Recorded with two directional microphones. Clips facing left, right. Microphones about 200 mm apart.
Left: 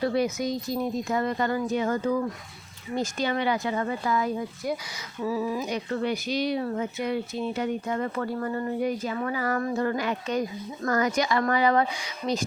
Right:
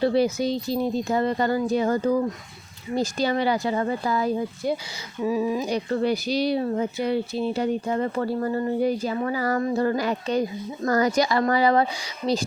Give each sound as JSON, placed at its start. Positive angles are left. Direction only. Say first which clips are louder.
{"t": 0.0, "sound": "speech", "louder": "right 4 dB", "side_deg": -30}
{"t": 5.2, "sound": "speech", "louder": "right 4 dB", "side_deg": -15}
{"t": 5.6, "sound": "speech", "louder": "right 4 dB", "side_deg": -35}